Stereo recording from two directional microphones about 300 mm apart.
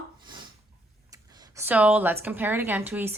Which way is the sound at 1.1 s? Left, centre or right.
Centre.